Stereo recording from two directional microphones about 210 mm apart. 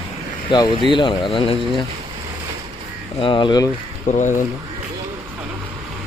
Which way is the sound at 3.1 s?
25° left (ahead or behind).